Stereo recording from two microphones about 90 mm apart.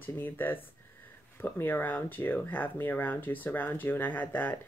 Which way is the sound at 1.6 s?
20° left (ahead or behind).